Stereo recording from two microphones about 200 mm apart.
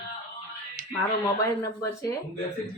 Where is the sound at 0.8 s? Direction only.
45° right (ahead or behind).